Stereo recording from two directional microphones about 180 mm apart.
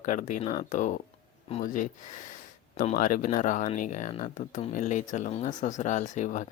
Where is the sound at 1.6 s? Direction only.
45° left (ahead or behind).